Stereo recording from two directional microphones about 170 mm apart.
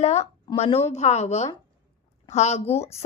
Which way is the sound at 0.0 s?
40° left (ahead or behind).